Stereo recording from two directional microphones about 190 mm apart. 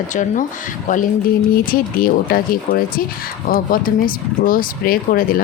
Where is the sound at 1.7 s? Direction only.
50° left (ahead or behind).